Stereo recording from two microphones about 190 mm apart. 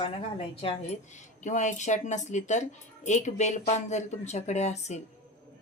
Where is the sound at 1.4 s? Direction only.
40° left (ahead or behind).